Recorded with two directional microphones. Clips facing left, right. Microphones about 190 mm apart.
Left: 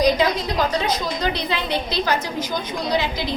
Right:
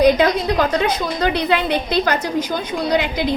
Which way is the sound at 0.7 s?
60° right (ahead or behind).